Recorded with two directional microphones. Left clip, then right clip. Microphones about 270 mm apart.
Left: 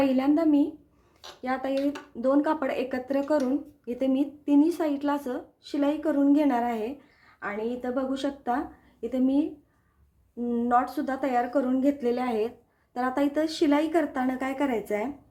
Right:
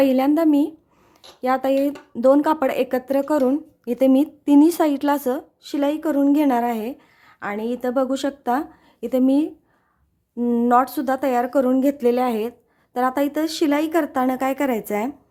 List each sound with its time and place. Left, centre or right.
0.0 s speech: right